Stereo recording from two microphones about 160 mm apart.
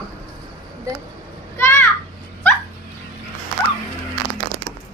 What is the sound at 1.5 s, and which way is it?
Children playing, 15° left (ahead or behind).